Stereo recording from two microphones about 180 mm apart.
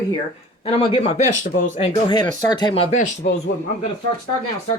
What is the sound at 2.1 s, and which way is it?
Speech, 25° left (ahead or behind).